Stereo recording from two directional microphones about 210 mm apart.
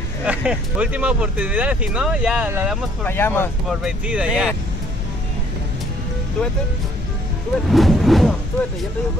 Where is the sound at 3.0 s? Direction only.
10° left (ahead or behind).